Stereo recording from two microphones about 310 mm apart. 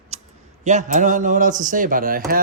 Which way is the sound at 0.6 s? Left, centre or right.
Right.